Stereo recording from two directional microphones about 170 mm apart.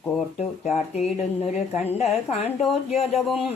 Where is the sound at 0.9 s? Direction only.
35° left (ahead or behind).